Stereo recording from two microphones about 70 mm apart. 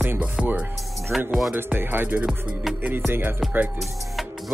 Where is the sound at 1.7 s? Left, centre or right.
Right.